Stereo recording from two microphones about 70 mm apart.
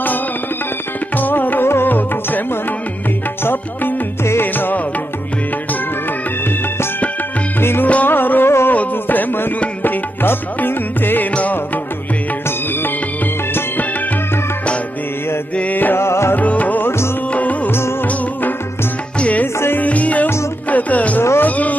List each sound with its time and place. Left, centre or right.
1.1 s music: left
3.4 s music: left
7.6 s music: left
15.5 s music: left
16.0 s music: left
16.3 s music: left
17.6 s music: left
19.1 s music: centre
19.4 s music: left
21.2 s a sound: left
21.5 s a sound: left